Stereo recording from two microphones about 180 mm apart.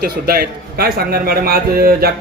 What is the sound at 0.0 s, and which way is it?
A man's voice, 55° right (ahead or behind).